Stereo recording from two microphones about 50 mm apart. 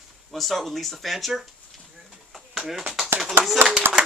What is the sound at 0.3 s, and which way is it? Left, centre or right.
Speech, centre.